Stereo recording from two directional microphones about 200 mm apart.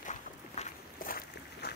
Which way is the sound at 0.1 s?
40° left (ahead or behind).